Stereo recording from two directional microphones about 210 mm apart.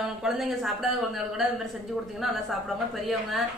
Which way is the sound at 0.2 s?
Centre (ahead or behind).